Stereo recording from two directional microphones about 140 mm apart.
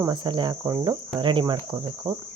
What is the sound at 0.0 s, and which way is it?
Cricket, 35° right (ahead or behind).